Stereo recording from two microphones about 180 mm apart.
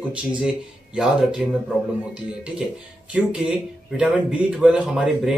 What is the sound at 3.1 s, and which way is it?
Speech, 5° right (ahead or behind).